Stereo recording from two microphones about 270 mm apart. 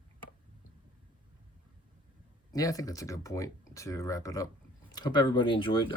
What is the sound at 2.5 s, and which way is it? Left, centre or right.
Speech, centre.